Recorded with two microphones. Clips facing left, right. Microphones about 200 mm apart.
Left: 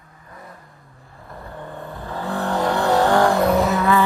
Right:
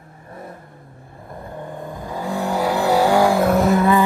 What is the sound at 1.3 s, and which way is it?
Vehicle, 15° right (ahead or behind).